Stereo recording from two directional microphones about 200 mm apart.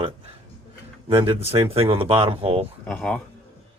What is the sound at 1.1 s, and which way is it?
Speech, 25° right (ahead or behind).